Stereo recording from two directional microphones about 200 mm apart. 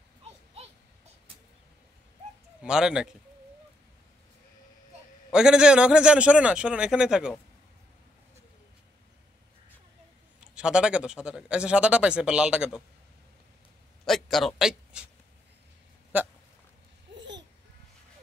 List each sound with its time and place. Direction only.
2.6 s a man's voice: 5° right (ahead or behind)
5.3 s a man's voice: 5° right (ahead or behind)
10.4 s a man's voice: 5° right (ahead or behind)
14.0 s speech: centre (ahead or behind)
16.1 s a sound: 10° right (ahead or behind)
17.1 s babbling: 65° right (ahead or behind)